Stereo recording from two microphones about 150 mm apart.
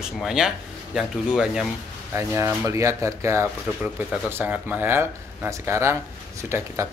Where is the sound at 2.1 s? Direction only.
20° right (ahead or behind).